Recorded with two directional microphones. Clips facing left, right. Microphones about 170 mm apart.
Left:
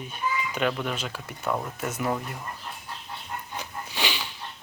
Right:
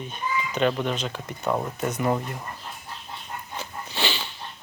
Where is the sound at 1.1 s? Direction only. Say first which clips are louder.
Right 3 dB; 15° right (ahead or behind).